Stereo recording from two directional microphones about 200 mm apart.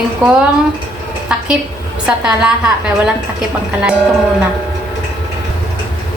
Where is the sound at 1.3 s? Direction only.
5° right (ahead or behind).